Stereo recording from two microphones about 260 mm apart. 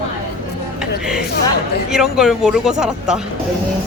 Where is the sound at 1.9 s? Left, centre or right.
Centre.